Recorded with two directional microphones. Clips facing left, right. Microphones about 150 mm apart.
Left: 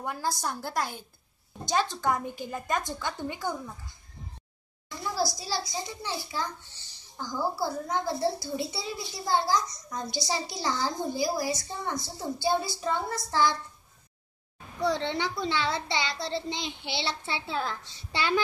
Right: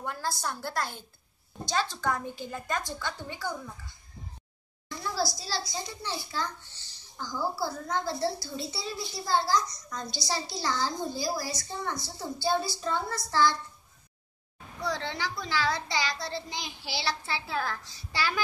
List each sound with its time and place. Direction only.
0.0 s a woman's voice: 10° left (ahead or behind)
5.1 s a child's voice: 15° left (ahead or behind)
14.8 s a child's voice: 25° left (ahead or behind)